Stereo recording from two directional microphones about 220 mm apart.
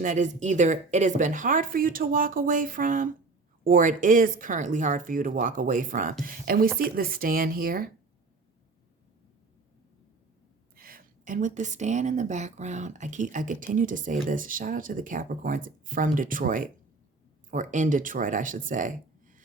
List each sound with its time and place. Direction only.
0.0 s a woman's voice: 35° right (ahead or behind)
10.8 s a woman's voice: 40° right (ahead or behind)